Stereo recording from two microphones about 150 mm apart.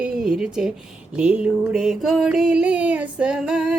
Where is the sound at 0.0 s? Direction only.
5° right (ahead or behind).